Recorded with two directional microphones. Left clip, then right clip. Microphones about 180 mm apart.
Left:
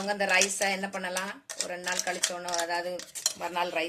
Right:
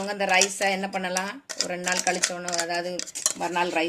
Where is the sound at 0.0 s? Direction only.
50° right (ahead or behind).